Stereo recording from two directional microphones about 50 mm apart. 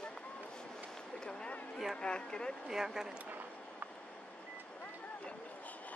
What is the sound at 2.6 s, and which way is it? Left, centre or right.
Speech, centre.